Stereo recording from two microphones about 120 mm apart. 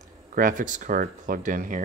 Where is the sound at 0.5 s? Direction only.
90° right.